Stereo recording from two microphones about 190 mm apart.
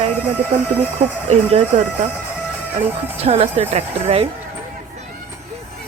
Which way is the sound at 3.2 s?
35° right (ahead or behind).